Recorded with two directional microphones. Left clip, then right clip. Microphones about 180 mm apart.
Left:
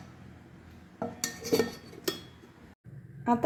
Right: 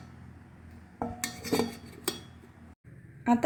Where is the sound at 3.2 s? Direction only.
Centre (ahead or behind).